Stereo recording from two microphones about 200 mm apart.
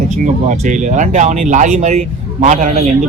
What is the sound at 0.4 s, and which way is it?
Speech, 35° right (ahead or behind).